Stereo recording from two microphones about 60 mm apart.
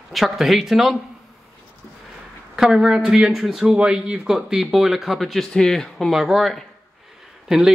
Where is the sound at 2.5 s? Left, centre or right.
Centre.